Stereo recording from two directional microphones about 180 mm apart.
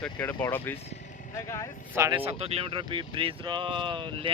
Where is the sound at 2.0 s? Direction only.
25° right (ahead or behind).